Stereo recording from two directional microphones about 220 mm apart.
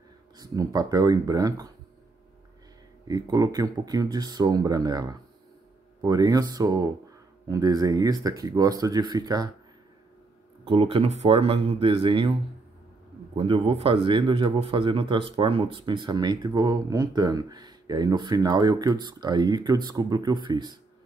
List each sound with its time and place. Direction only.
0.4 s speech: 15° right (ahead or behind)
3.1 s speech: 15° right (ahead or behind)
10.6 s speech: 25° right (ahead or behind)
13.4 s speech: 25° right (ahead or behind)